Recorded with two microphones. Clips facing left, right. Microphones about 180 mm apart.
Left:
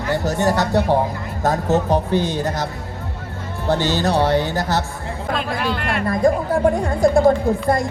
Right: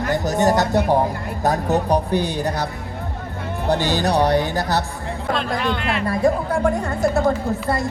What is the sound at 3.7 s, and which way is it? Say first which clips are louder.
Speech: left 1 dB; 15° right (ahead or behind).